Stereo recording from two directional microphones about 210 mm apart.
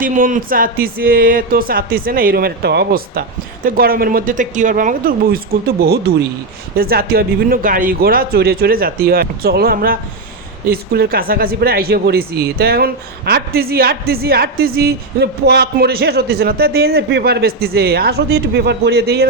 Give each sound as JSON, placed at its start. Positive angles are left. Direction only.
{"t": 0.0, "sound": "speech", "side_deg": -40}
{"t": 6.7, "sound": "speech", "side_deg": -45}